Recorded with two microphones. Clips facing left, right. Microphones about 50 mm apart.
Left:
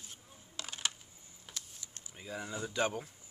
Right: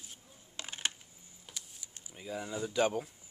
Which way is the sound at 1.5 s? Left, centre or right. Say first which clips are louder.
Left 1 dB; centre.